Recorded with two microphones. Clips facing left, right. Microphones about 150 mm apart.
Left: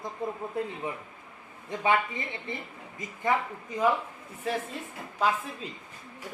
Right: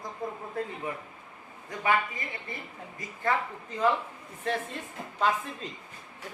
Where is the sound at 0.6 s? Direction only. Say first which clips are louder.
Left 1 dB; 20° left (ahead or behind).